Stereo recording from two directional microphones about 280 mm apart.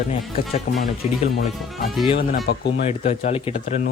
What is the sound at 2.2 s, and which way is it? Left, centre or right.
Speech, left.